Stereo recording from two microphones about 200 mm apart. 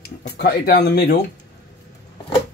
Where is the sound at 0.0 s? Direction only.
50° left (ahead or behind).